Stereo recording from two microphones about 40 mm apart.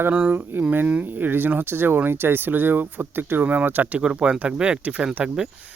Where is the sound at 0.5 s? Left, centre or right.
Right.